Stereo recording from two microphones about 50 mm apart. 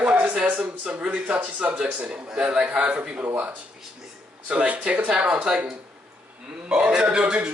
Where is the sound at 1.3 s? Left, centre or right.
Right.